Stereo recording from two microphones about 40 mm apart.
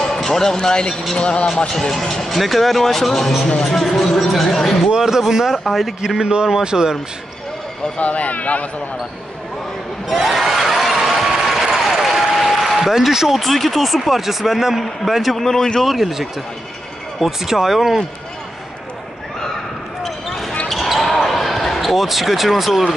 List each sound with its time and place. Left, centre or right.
0.0 s speech: centre
1.7 s speech: centre
4.9 s speech: centre
6.0 s a man's voice: centre
8.0 s speech: left
10.2 s a sound: centre
13.4 s speech: centre
15.3 s speech: centre
15.8 s speech: centre
20.0 s basketball bounce: centre